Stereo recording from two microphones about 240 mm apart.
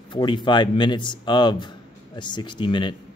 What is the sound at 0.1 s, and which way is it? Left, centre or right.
Speech, centre.